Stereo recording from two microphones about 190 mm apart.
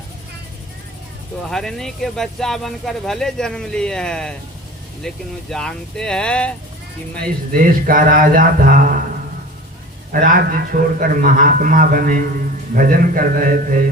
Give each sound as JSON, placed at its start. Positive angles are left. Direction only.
{"t": 1.5, "sound": "speech", "side_deg": 0}
{"t": 7.5, "sound": "speech", "side_deg": -45}
{"t": 10.1, "sound": "speech", "side_deg": -50}